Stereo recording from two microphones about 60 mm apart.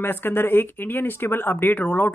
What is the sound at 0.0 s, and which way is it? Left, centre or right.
Speech, left.